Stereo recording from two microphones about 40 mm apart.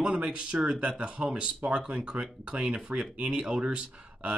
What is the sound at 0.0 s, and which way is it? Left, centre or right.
Speech, right.